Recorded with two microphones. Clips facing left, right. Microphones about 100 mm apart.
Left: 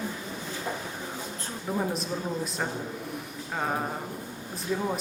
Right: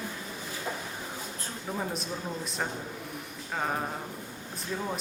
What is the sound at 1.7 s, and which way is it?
Speech, 5° left (ahead or behind).